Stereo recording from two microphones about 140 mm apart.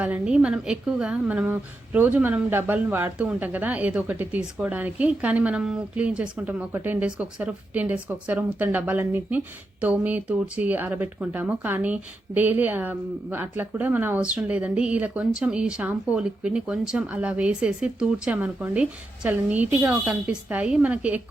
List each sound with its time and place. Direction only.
0.0 s a woman's voice: 10° right (ahead or behind)